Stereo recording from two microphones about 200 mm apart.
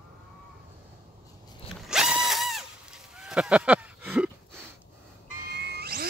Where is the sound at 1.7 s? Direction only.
Centre (ahead or behind).